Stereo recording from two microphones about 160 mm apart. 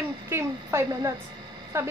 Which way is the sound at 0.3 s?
15° right (ahead or behind).